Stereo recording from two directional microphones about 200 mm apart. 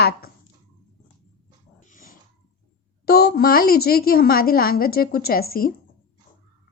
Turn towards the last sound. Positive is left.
turn(degrees=50)  # may be behind; listen again after turning